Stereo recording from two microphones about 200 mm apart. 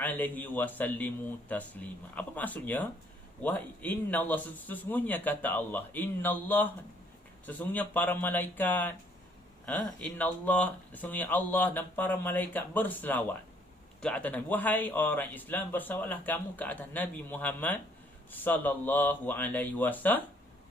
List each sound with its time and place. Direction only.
0.0 s speech: 10° left (ahead or behind)